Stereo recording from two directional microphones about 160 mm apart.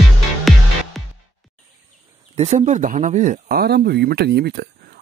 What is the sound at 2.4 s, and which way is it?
Speech, 45° right (ahead or behind).